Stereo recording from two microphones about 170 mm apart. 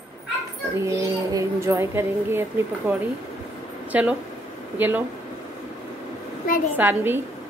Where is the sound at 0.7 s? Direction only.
20° right (ahead or behind).